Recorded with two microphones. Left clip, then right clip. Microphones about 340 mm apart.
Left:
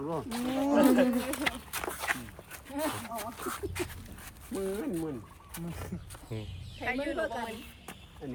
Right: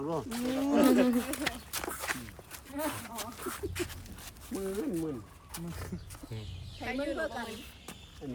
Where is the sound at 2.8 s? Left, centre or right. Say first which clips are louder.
Left 3 dB; centre.